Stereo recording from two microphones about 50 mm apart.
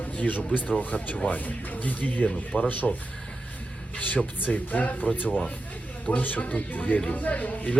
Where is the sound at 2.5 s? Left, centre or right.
Left.